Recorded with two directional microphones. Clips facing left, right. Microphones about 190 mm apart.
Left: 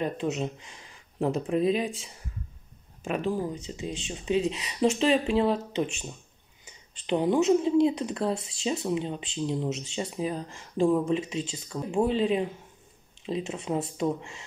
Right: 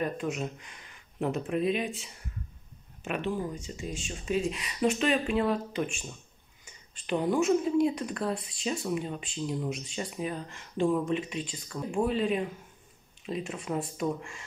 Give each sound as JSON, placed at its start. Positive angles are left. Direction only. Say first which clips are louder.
{"t": 0.0, "sound": "speech", "louder": "left 3 dB", "side_deg": 25}
{"t": 3.0, "sound": "speech", "louder": "left 3 dB", "side_deg": 35}
{"t": 3.5, "sound": "speech", "louder": "left 3 dB", "side_deg": 20}
{"t": 7.1, "sound": "speech", "louder": "left 3 dB", "side_deg": 20}